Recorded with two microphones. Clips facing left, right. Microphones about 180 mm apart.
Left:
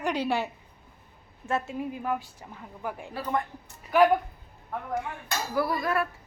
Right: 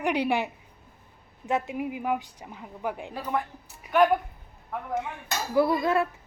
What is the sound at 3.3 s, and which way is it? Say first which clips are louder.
Speech: right 1 dB; centre (ahead or behind).